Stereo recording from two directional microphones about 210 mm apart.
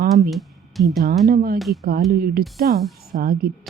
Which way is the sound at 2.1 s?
45° right (ahead or behind).